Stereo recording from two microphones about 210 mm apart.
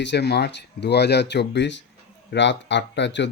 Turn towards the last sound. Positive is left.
turn(degrees=55)  # may be behind; listen again after turning